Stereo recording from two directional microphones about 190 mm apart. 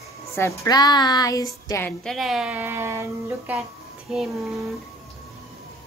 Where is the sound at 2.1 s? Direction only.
Centre (ahead or behind).